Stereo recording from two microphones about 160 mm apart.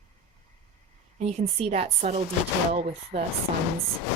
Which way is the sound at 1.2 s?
40° right (ahead or behind).